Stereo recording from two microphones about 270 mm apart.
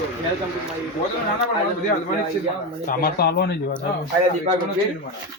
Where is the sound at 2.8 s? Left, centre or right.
Left.